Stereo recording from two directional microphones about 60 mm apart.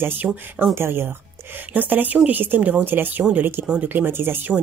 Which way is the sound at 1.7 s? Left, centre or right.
Right.